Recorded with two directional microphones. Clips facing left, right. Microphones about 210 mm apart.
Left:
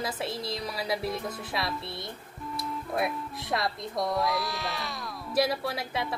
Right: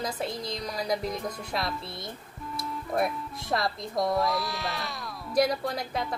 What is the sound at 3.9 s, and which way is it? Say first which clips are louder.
Speech: right 3 dB; 20° right (ahead or behind).